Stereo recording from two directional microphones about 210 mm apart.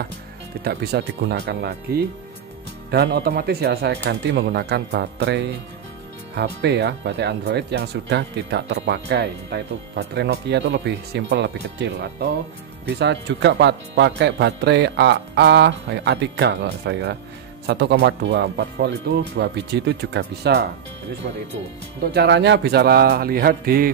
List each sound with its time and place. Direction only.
0.7 s speech: 50° right (ahead or behind)
22.1 s speech: 55° right (ahead or behind)